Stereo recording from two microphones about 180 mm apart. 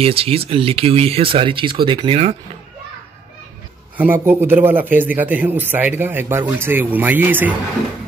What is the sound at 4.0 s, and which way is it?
Speech, 10° right (ahead or behind).